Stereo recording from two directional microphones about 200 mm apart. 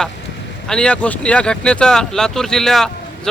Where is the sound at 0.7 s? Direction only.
5° left (ahead or behind).